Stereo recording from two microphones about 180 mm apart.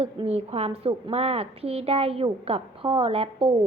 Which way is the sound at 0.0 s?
35° right (ahead or behind).